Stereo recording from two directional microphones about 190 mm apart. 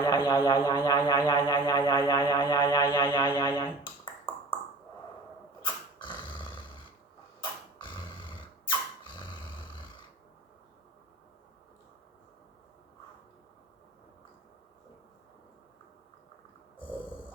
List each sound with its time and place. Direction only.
0.0 s speech: 20° left (ahead or behind)
5.6 s dog: 25° left (ahead or behind)
7.4 s a sound: 25° left (ahead or behind)